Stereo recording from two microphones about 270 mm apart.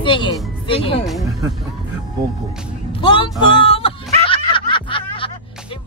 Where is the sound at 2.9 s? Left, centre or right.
Centre.